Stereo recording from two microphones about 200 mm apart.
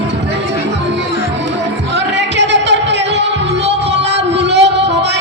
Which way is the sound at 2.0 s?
60° right (ahead or behind).